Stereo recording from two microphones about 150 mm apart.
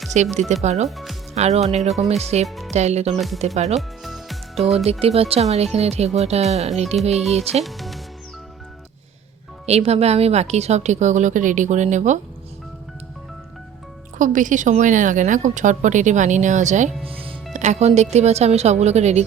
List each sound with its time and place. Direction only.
0.3 s a woman's voice: 50° right (ahead or behind)
0.9 s speech: centre (ahead or behind)
1.4 s a woman's voice: 45° right (ahead or behind)
3.8 s music: centre (ahead or behind)
4.9 s a woman's voice: 40° right (ahead or behind)
7.6 s music: centre (ahead or behind)
9.6 s a woman's voice: 45° right (ahead or behind)
14.2 s a woman's voice: 60° right (ahead or behind)
17.1 s music: 35° right (ahead or behind)
17.5 s a woman's voice: 50° right (ahead or behind)